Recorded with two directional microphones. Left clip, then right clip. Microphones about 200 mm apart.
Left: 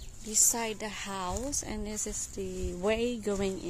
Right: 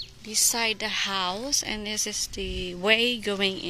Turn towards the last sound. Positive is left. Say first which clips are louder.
# right 6 dB
turn(degrees=10)  # may be behind; listen again after turning